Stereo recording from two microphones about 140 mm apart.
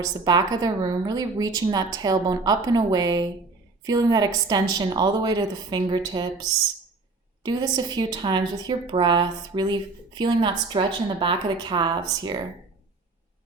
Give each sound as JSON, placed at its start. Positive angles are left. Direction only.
{"t": 0.0, "sound": "a woman's voice", "side_deg": -25}